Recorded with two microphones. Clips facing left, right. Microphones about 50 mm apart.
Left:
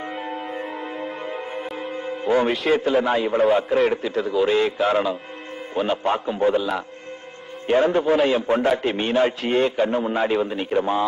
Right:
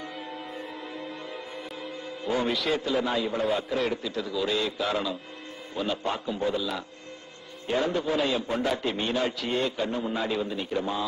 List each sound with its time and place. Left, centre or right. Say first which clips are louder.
1.8 s music: left 8 dB; left
2.8 s a man's voice: left 7 dB; left